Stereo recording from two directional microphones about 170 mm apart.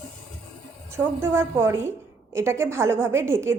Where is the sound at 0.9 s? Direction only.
15° right (ahead or behind).